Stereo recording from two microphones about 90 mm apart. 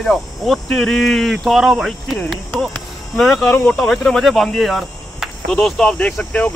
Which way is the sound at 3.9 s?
5° left (ahead or behind).